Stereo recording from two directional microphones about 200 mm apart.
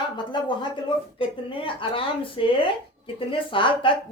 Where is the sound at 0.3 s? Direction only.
25° left (ahead or behind).